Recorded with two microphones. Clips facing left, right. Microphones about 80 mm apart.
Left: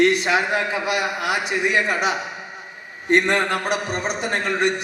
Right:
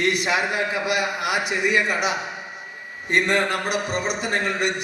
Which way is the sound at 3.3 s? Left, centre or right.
Left.